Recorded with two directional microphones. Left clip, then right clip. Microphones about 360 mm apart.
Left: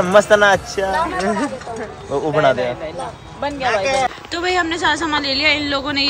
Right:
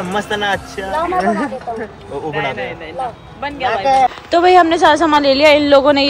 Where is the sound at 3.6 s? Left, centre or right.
Centre.